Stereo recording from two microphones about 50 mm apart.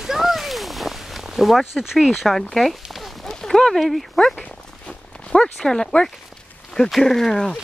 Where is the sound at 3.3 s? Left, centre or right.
Centre.